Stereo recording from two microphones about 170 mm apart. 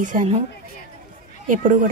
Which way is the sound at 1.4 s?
50° right (ahead or behind).